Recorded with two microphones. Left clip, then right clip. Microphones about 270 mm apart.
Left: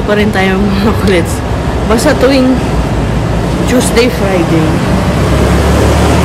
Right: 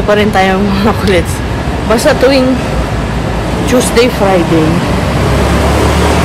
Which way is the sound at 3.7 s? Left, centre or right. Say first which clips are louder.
Right 1 dB; centre.